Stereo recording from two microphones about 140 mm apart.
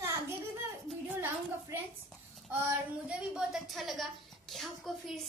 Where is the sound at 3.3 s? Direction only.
5° right (ahead or behind).